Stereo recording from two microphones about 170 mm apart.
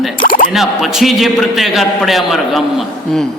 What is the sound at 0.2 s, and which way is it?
Music, 55° left (ahead or behind).